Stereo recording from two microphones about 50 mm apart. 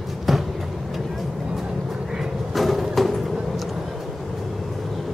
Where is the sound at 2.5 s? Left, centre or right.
Centre.